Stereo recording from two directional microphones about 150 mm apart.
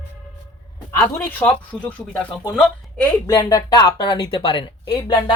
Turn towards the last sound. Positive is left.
turn(degrees=30)  # may be behind; listen again after turning